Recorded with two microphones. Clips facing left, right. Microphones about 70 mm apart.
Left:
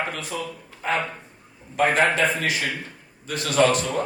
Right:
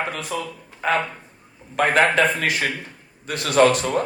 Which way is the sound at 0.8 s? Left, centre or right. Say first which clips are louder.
Right 3 dB; right.